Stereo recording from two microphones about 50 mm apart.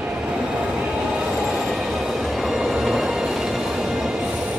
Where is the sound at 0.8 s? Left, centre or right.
Centre.